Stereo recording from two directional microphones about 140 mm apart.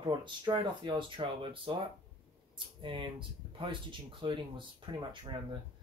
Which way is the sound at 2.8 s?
35° right (ahead or behind).